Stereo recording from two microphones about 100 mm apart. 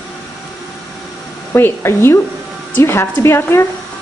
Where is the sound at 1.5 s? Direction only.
25° left (ahead or behind).